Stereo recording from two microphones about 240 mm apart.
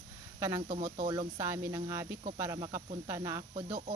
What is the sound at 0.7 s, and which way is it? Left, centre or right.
Speech, right.